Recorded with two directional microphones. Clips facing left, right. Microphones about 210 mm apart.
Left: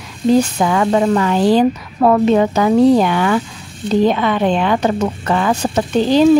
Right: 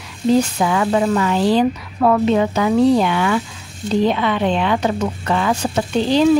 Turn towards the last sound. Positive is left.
turn(degrees=45)  # may be behind; listen again after turning